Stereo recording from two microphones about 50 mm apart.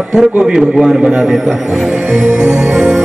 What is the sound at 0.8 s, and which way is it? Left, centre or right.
Speech, centre.